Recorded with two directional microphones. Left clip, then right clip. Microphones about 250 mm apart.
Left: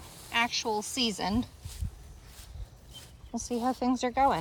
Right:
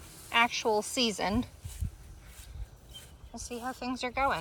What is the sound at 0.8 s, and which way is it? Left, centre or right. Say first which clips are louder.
Speech: right 1 dB; centre.